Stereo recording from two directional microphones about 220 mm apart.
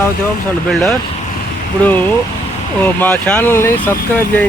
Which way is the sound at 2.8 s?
5° left (ahead or behind).